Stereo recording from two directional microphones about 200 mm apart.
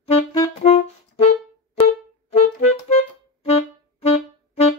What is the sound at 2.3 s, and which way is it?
Clarinet, 35° left (ahead or behind).